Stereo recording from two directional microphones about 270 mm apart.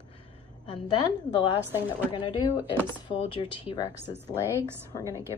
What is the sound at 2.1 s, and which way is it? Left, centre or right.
A woman's voice, centre.